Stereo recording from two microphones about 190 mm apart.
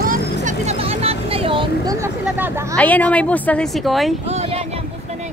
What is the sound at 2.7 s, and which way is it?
A woman's voice, 10° left (ahead or behind).